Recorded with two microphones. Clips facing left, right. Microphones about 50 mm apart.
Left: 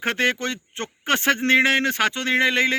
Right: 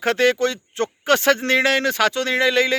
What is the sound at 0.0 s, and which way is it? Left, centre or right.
A man's voice, left.